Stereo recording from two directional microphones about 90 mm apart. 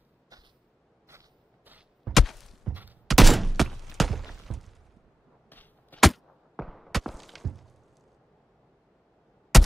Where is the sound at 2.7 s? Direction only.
20° right (ahead or behind).